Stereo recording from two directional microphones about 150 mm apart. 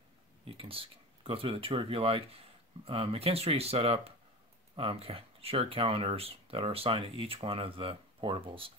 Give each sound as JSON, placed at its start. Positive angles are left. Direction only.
{"t": 0.5, "sound": "speech", "side_deg": -40}